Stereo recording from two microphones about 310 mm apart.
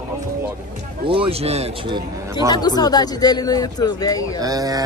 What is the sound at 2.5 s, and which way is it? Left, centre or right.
Speech, centre.